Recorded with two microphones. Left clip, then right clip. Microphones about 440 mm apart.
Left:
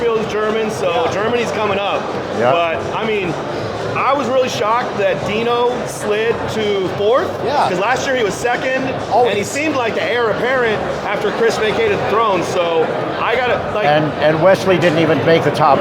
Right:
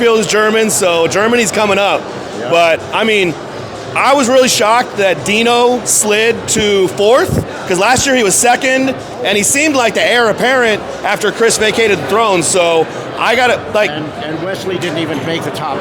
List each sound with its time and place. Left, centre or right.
0.0 s speech: right
14.4 s speech: centre